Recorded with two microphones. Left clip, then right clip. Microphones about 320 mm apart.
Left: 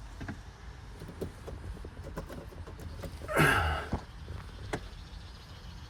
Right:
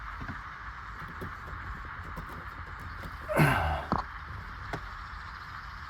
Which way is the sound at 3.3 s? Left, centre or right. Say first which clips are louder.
Even; right.